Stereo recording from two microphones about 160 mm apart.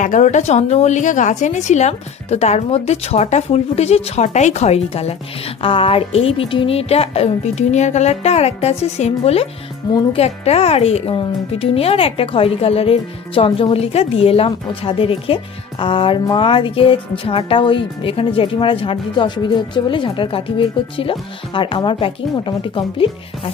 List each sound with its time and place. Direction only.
0.0 s a woman's voice: 50° left (ahead or behind); by 23.5 s 35° left (ahead or behind)